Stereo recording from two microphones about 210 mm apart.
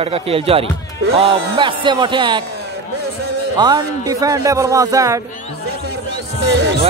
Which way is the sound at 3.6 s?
20° right (ahead or behind).